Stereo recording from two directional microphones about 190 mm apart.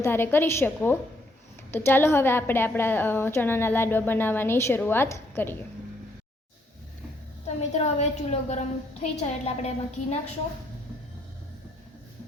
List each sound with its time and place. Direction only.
0.0 s a woman's voice: 10° left (ahead or behind)
7.7 s a woman's voice: 35° left (ahead or behind)